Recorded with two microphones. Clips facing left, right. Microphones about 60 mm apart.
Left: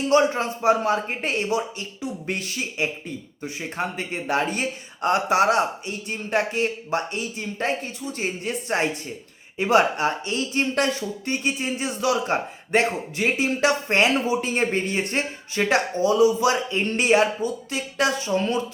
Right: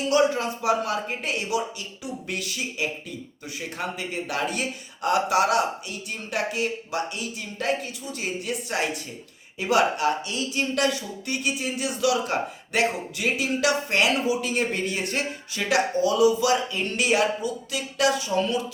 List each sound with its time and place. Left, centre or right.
0.1 s speech: left